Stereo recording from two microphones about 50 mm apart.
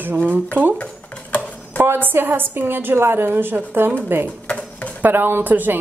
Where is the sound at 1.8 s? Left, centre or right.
Right.